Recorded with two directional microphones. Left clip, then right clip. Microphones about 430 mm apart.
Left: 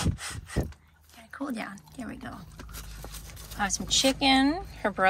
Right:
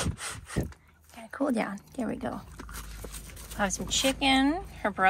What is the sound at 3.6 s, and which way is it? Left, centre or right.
Speech, centre.